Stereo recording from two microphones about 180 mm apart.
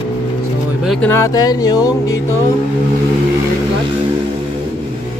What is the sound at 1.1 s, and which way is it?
Speech, 15° left (ahead or behind).